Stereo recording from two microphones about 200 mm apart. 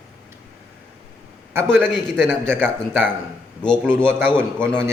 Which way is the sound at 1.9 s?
Centre (ahead or behind).